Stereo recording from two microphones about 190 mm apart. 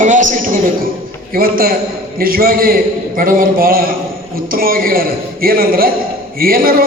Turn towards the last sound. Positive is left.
turn(degrees=-50)  # may be behind; listen again after turning